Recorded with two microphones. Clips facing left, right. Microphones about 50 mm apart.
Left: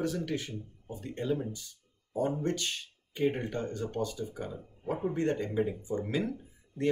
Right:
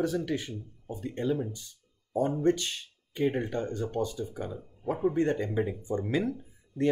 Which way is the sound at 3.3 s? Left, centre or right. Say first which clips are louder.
Right 3 dB; right.